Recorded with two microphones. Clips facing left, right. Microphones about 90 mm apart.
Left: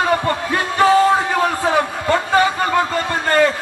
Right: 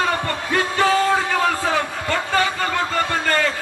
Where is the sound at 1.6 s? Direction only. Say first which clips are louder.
Left 4 dB; 20° left (ahead or behind).